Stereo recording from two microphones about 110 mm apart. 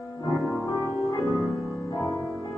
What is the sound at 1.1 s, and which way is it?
Music, 30° left (ahead or behind).